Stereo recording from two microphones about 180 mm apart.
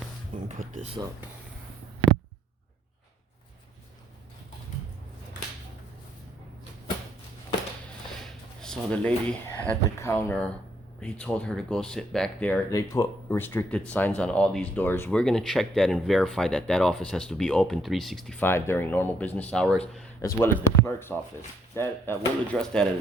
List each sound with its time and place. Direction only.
0.3 s speech: 45° right (ahead or behind)
8.2 s a sound: 5° left (ahead or behind)
9.6 s speech: 10° left (ahead or behind)